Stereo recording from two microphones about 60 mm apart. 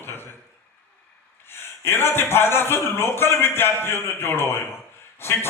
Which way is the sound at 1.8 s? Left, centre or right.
Left.